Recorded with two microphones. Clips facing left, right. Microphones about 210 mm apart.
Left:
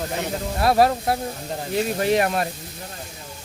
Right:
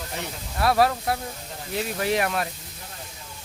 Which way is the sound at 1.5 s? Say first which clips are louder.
Left 6 dB; 45° left (ahead or behind).